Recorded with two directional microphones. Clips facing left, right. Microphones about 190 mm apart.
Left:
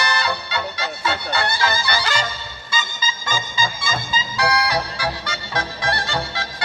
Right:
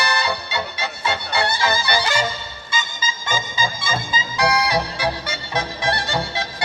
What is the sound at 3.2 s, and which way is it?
Music, 20° right (ahead or behind).